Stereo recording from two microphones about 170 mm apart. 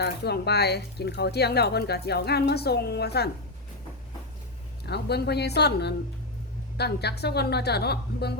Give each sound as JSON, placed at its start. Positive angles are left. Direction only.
{"t": 0.0, "sound": "speech", "side_deg": 75}
{"t": 4.9, "sound": "speech", "side_deg": 75}